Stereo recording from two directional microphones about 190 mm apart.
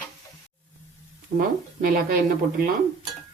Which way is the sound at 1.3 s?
50° right (ahead or behind).